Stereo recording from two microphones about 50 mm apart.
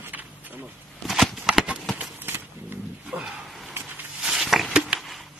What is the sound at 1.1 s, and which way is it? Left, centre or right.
Horse, centre.